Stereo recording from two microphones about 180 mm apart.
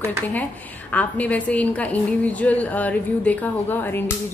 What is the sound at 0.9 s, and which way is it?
A woman's voice, 10° left (ahead or behind).